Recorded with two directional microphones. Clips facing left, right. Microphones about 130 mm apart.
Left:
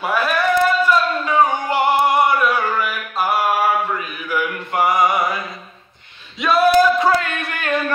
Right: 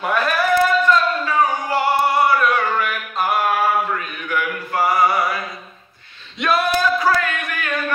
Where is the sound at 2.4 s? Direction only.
5° left (ahead or behind).